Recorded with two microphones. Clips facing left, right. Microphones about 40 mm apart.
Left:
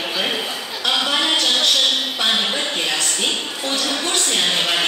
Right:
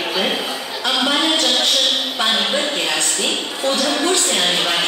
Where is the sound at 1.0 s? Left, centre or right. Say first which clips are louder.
Right 4 dB; centre.